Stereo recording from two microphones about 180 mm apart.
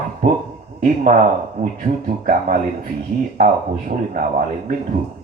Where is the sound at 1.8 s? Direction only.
50° right (ahead or behind).